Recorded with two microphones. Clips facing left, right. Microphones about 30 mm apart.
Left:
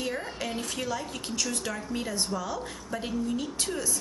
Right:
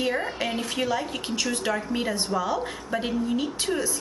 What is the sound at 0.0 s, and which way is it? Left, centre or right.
Speech, right.